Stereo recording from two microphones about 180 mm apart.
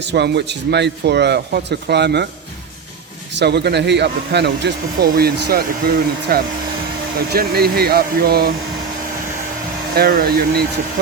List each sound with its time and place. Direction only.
0.0 s speech: 70° right (ahead or behind)
3.3 s speech: 65° right (ahead or behind)
9.9 s speech: 55° right (ahead or behind)